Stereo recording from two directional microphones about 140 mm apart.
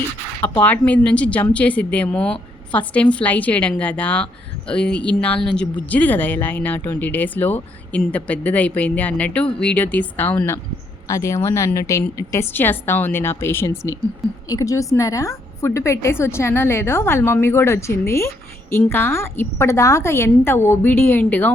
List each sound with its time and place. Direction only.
0.6 s a woman's voice: 10° left (ahead or behind)